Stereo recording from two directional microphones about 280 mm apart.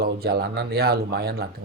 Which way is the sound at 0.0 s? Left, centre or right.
Right.